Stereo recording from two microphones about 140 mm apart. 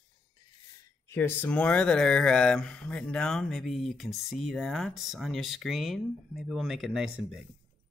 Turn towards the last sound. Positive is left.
turn(degrees=-5)  # may be behind; listen again after turning